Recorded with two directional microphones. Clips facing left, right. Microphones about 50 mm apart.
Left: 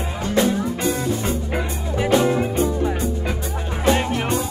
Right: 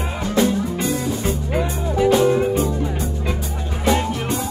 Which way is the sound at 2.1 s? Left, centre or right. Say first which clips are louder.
Even; centre.